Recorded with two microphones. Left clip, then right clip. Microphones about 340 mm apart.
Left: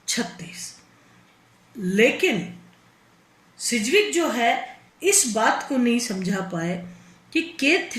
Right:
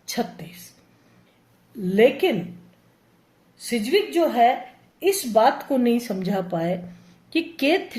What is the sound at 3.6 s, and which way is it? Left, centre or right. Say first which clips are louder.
A woman's voice: left 2 dB; right.